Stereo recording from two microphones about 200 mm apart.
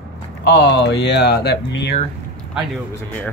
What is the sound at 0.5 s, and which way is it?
Speech, 60° left (ahead or behind).